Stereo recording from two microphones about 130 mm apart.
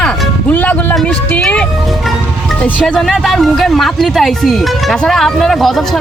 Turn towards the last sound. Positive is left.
turn(degrees=0)  # may be behind; listen again after turning